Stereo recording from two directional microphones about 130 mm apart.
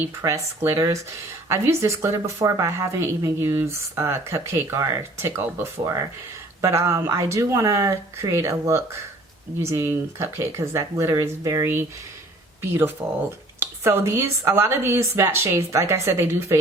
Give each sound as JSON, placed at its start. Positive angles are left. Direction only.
{"t": 0.2, "sound": "speech", "side_deg": -25}
{"t": 13.0, "sound": "speech", "side_deg": -10}
{"t": 13.6, "sound": "speech", "side_deg": -20}